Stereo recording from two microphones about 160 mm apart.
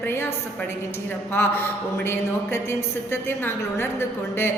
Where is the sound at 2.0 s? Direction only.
15° left (ahead or behind).